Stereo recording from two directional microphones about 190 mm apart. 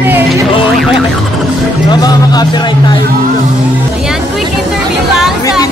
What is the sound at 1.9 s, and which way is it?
Music, 20° left (ahead or behind).